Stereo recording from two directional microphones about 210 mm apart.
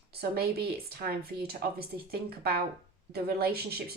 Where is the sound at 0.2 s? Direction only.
50° right (ahead or behind).